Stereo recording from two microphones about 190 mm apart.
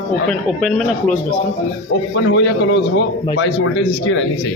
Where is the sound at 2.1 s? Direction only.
70° left (ahead or behind).